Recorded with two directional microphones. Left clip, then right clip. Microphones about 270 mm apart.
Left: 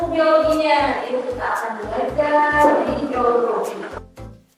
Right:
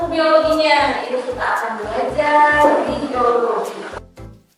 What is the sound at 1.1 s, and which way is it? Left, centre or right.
Music, centre.